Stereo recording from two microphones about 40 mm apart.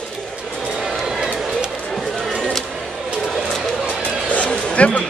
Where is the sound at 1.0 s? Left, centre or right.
Centre.